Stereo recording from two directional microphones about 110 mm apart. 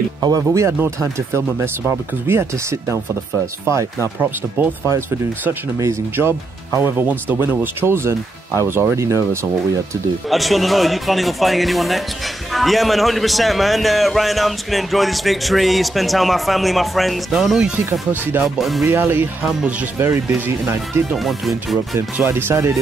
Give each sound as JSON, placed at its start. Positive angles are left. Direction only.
{"t": 0.2, "sound": "speech", "side_deg": -30}
{"t": 10.3, "sound": "a man's voice", "side_deg": 0}
{"t": 18.9, "sound": "speech", "side_deg": -20}
{"t": 21.1, "sound": "a man's voice", "side_deg": 0}
{"t": 22.1, "sound": "speech", "side_deg": -20}